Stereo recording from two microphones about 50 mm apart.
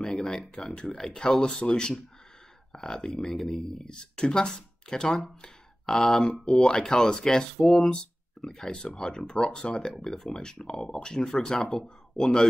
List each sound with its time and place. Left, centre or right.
0.0 s speech: centre
7.6 s speech: centre
7.9 s speech: centre
9.9 s speech: centre